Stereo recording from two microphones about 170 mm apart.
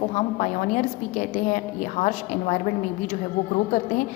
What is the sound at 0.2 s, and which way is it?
A woman's voice, 45° left (ahead or behind).